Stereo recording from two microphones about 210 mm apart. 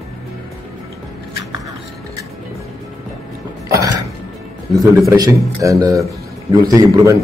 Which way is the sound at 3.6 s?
15° right (ahead or behind).